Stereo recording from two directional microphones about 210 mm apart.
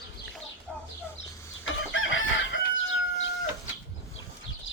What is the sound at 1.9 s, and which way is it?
Chicken, 65° left (ahead or behind).